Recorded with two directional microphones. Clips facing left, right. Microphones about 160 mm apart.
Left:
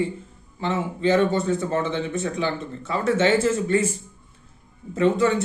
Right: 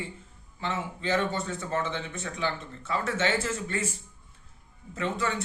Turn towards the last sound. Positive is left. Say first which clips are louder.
# left 11 dB
turn(degrees=20)  # may be behind; listen again after turning